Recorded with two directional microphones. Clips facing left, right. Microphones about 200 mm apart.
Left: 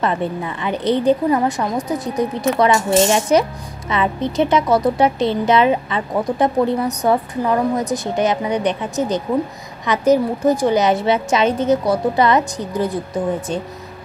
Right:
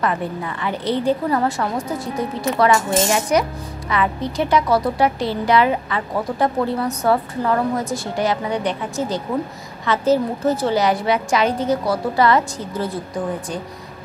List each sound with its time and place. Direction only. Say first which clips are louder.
0.0 s a woman's voice: left 2 dB; 25° left (ahead or behind)